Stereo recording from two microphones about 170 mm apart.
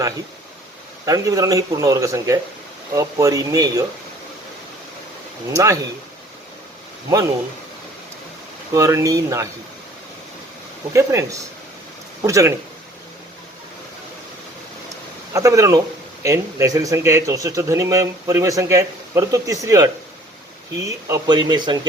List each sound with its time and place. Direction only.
1.0 s speech: 20° right (ahead or behind)
5.5 s speech: 20° right (ahead or behind)
8.7 s speech: 20° right (ahead or behind)
10.9 s speech: 20° right (ahead or behind)
15.3 s speech: 20° right (ahead or behind)